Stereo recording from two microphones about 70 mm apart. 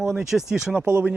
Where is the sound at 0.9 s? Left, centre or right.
Right.